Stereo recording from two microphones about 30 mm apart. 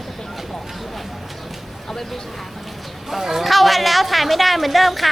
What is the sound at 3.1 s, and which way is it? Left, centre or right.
Speech, centre.